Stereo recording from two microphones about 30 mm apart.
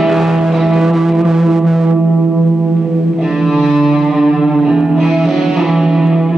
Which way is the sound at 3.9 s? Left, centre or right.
Centre.